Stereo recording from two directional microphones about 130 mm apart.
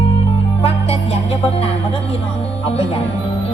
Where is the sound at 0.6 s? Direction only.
50° left (ahead or behind).